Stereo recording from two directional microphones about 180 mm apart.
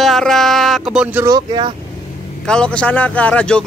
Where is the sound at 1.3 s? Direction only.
25° right (ahead or behind).